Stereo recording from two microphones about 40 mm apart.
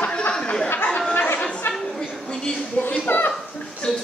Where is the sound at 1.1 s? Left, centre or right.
Left.